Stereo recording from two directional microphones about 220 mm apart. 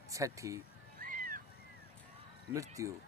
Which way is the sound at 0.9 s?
40° right (ahead or behind).